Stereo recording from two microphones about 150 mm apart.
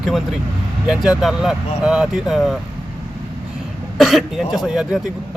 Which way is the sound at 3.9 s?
Centre (ahead or behind).